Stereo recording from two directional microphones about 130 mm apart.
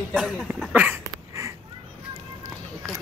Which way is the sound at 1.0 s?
25° right (ahead or behind).